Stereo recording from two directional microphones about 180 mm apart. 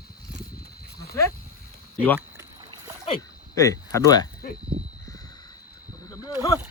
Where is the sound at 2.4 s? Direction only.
20° right (ahead or behind).